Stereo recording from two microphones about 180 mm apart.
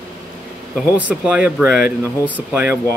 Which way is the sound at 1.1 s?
5° right (ahead or behind).